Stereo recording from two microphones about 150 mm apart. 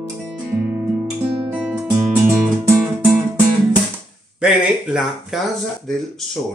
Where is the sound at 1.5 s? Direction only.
5° right (ahead or behind).